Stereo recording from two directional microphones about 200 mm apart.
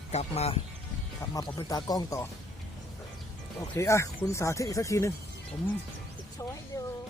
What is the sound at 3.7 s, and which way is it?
Speech, 15° left (ahead or behind).